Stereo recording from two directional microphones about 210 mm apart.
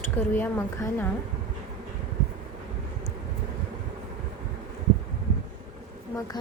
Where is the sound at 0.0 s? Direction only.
10° left (ahead or behind).